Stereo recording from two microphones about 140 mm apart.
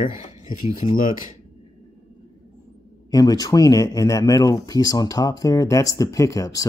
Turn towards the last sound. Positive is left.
turn(degrees=25)  # may be behind; listen again after turning